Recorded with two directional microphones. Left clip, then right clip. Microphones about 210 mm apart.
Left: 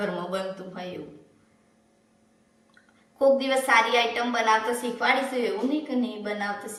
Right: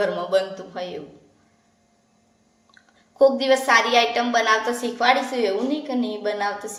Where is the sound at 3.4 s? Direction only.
50° right (ahead or behind).